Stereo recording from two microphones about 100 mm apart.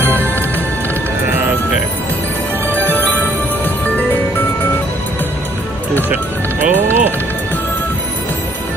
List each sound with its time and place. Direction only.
6.6 s music: 20° right (ahead or behind)